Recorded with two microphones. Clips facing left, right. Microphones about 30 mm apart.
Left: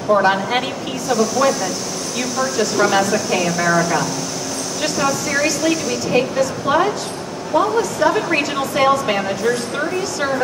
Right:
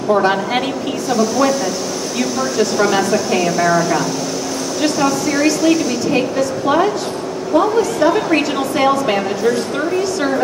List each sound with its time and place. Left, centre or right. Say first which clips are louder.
0.1 s a woman's voice: even; centre